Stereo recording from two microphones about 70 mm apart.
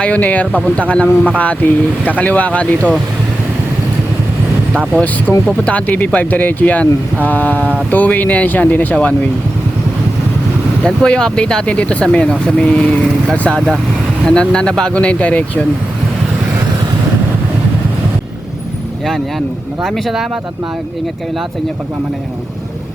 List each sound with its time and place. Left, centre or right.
0.0 s speech: centre
4.9 s speech: left
10.8 s speech: centre
19.8 s speech: centre